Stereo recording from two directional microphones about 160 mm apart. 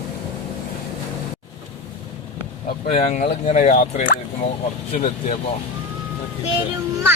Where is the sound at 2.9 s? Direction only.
40° left (ahead or behind).